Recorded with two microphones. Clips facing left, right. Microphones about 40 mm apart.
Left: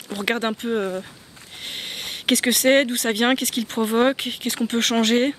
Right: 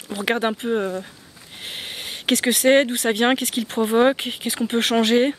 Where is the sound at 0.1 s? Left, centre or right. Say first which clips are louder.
Right 1 dB; centre.